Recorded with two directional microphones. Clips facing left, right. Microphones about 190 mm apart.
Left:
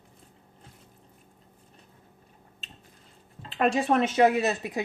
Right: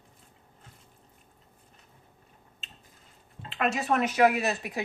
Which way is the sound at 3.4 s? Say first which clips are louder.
Left 4 dB; 35° left (ahead or behind).